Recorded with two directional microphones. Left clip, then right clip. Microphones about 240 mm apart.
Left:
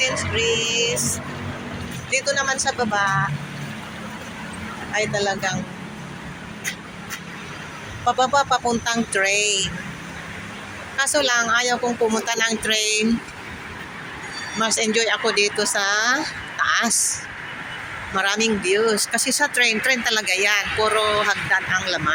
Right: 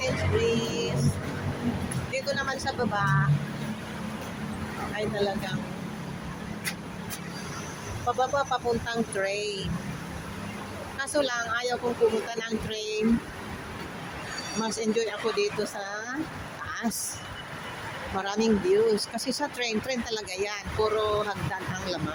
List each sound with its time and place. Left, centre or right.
0.0 s music: centre
2.1 s speech: left
4.9 s speech: left
8.0 s speech: left
10.9 s speech: centre
12.3 s speech: centre
14.6 s speech: centre
18.2 s speech: centre